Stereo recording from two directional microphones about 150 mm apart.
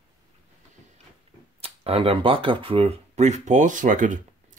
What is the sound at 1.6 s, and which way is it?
Speech, 40° right (ahead or behind).